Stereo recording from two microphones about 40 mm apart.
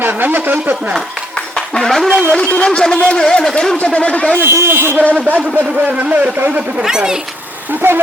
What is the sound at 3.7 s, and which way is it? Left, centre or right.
Speech, left.